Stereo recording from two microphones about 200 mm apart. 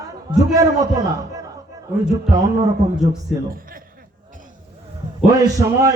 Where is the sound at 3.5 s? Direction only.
45° right (ahead or behind).